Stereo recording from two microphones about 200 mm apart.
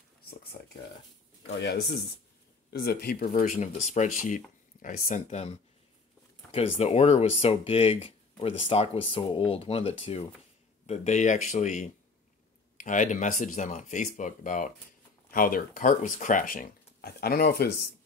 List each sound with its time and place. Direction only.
1.6 s speech: 60° left (ahead or behind); by 5.5 s 35° left (ahead or behind)
6.5 s speech: 30° left (ahead or behind); by 17.6 s 50° left (ahead or behind)